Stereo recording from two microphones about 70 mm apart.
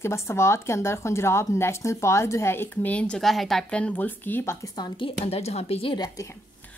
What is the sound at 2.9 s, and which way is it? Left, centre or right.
Speech, centre.